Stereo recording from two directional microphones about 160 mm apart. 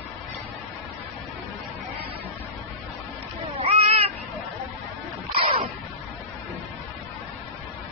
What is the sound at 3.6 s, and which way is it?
Cat, 40° right (ahead or behind).